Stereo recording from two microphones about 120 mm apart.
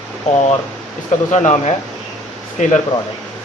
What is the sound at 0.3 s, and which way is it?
Speech, 65° left (ahead or behind).